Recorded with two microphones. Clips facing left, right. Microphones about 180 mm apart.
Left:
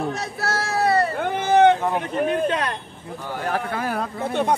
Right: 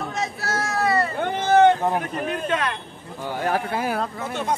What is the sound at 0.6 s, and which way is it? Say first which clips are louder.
Speech: left 2 dB; 35° left (ahead or behind).